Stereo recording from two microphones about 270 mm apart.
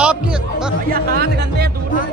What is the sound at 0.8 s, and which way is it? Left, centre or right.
Speech, right.